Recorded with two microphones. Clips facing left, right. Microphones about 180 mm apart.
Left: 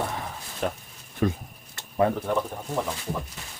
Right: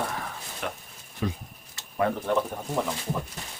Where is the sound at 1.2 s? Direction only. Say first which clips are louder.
Left 5 dB; 50° left (ahead or behind).